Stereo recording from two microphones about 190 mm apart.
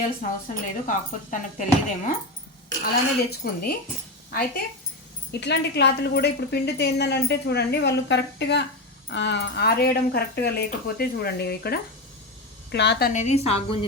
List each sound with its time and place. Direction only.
0.0 s a woman's voice: 45° left (ahead or behind)
2.8 s a woman's voice: 55° left (ahead or behind)
5.3 s a woman's voice: 60° left (ahead or behind); by 13.7 s 30° left (ahead or behind)